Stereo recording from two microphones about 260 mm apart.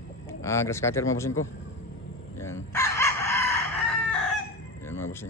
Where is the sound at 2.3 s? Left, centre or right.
Centre.